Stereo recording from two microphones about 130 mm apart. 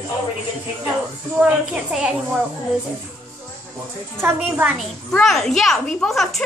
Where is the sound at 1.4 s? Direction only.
10° right (ahead or behind).